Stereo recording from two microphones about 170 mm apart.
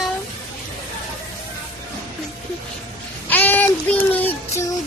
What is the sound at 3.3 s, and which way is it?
Child singing, 10° left (ahead or behind).